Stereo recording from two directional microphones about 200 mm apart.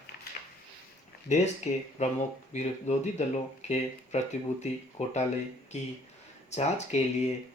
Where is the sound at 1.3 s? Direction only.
35° left (ahead or behind).